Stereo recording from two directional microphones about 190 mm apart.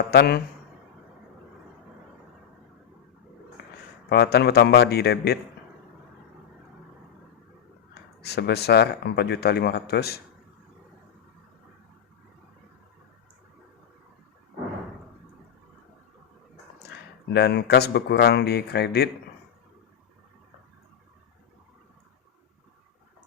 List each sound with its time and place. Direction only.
0.1 s speech: 60° left (ahead or behind)
4.1 s speech: 60° left (ahead or behind)
8.2 s speech: 60° left (ahead or behind)
17.3 s speech: 60° left (ahead or behind)